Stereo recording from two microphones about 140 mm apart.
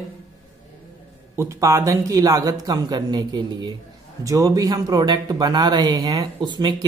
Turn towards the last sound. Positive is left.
turn(degrees=-35)  # may be behind; listen again after turning